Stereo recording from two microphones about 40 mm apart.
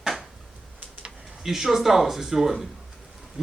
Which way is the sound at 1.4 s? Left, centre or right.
Centre.